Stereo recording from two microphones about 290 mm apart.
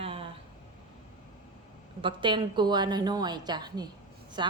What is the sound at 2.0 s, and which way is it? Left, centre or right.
A woman's voice, centre.